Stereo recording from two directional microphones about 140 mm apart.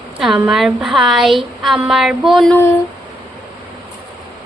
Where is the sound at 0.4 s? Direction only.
5° right (ahead or behind).